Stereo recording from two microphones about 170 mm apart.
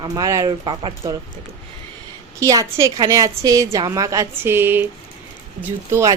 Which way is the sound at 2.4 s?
20° right (ahead or behind).